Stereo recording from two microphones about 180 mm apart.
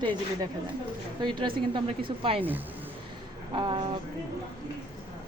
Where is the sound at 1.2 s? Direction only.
25° right (ahead or behind).